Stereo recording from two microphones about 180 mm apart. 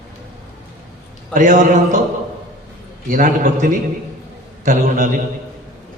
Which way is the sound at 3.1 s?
50° right (ahead or behind).